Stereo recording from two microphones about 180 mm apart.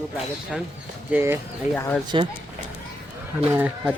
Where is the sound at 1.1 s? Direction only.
15° right (ahead or behind).